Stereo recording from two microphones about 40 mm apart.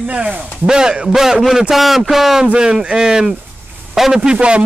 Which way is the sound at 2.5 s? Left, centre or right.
Centre.